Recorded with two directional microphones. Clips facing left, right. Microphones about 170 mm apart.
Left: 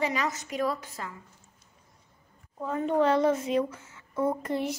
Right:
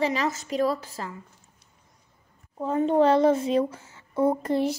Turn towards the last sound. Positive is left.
turn(degrees=-35)  # may be behind; listen again after turning